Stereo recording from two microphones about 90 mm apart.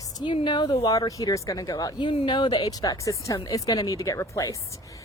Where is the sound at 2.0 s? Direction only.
65° left (ahead or behind).